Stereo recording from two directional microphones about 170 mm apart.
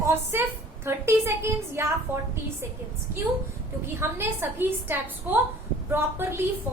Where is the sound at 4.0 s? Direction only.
15° right (ahead or behind).